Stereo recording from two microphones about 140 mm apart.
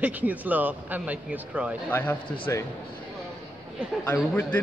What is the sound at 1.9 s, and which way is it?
Speech, 10° left (ahead or behind).